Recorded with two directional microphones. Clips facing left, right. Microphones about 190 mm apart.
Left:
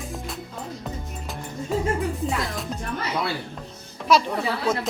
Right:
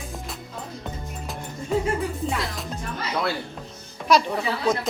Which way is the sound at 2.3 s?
Centre (ahead or behind).